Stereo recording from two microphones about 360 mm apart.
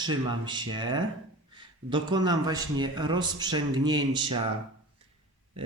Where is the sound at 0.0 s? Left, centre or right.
Centre.